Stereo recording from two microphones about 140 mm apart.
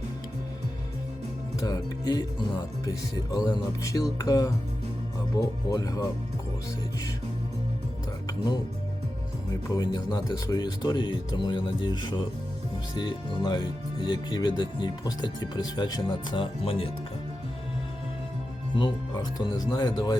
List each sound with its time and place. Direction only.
1.6 s music: 30° left (ahead or behind)
9.5 s speech: 25° left (ahead or behind); by 16.9 s 40° left (ahead or behind)
18.7 s speech: 35° left (ahead or behind)